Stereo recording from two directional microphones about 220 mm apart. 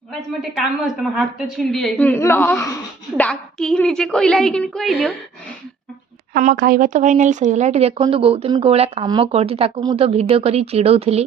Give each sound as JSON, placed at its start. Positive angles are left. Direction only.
{"t": 1.0, "sound": "a woman's voice", "side_deg": 0}
{"t": 6.3, "sound": "speech", "side_deg": -40}